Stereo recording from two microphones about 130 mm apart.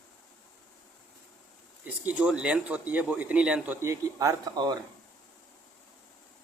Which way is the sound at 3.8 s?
25° right (ahead or behind).